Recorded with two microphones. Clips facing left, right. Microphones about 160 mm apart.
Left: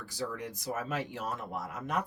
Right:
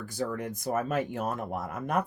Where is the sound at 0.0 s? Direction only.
50° right (ahead or behind).